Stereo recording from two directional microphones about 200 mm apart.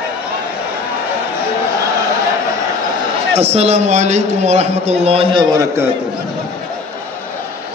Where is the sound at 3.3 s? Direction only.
30° right (ahead or behind).